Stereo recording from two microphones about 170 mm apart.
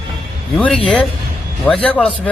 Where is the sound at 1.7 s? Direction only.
10° left (ahead or behind).